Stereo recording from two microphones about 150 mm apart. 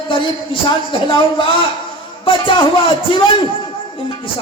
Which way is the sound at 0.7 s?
35° left (ahead or behind).